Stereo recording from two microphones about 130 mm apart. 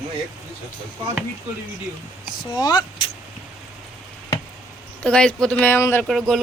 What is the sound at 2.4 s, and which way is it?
Speech, 35° left (ahead or behind).